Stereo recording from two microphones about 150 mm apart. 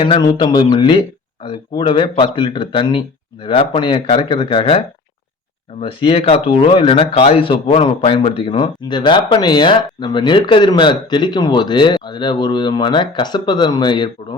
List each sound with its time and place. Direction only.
0.0 s speech: 35° left (ahead or behind)
5.8 s speech: 35° left (ahead or behind)